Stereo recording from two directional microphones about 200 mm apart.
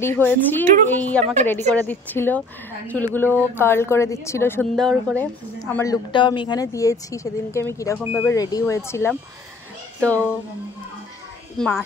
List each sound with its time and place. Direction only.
0.0 s speech: 10° left (ahead or behind)
1.2 s speech: 35° right (ahead or behind)
1.9 s speech: 10° left (ahead or behind)
6.1 s speech: 25° left (ahead or behind); by 10.3 s 5° left (ahead or behind)
11.5 s speech: 5° left (ahead or behind)